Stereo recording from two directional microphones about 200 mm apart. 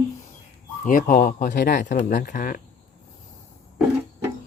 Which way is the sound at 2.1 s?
40° left (ahead or behind).